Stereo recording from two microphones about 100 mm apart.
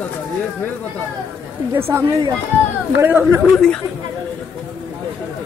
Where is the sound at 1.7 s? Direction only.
25° right (ahead or behind).